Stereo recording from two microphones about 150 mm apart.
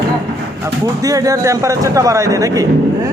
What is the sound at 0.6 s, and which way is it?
Speech, 20° right (ahead or behind).